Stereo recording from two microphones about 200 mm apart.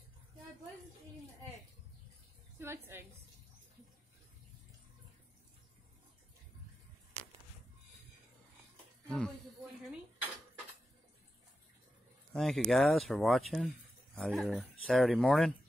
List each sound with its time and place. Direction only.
2.6 s a woman's voice: 10° right (ahead or behind)
9.0 s snake: 5° left (ahead or behind)
12.3 s speech: centre (ahead or behind)